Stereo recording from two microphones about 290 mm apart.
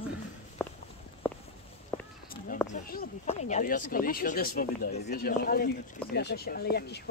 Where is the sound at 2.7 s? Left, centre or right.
Left.